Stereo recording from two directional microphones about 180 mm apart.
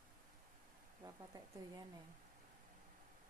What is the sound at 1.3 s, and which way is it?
Speech, 20° right (ahead or behind).